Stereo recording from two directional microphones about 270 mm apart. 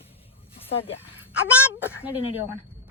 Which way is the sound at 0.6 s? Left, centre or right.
Left.